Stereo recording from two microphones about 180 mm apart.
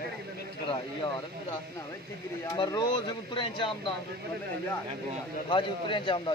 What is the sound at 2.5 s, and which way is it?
A man's voice, 20° left (ahead or behind).